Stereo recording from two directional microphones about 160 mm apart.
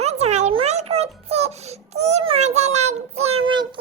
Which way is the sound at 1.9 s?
45° right (ahead or behind).